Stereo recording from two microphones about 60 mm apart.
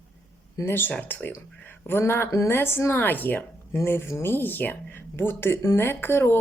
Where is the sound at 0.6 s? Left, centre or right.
Left.